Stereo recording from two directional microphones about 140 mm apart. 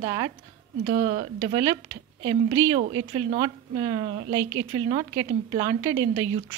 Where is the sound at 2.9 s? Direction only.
35° right (ahead or behind).